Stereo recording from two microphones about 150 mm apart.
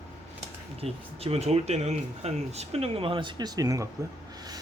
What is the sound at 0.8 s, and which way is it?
Speech, 40° right (ahead or behind).